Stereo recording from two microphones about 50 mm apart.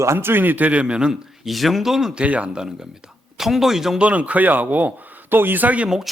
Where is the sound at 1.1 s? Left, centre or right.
Centre.